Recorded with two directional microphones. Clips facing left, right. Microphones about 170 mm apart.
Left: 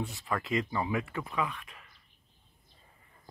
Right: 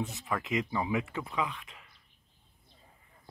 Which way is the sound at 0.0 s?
20° right (ahead or behind).